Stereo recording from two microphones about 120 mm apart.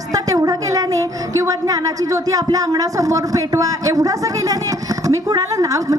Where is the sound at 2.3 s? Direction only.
30° right (ahead or behind).